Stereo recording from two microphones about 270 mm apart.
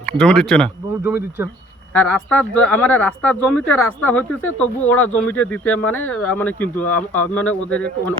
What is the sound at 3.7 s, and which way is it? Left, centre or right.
Speech, left.